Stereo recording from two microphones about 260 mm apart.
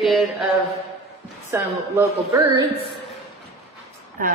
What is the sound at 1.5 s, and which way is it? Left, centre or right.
A woman's voice, centre.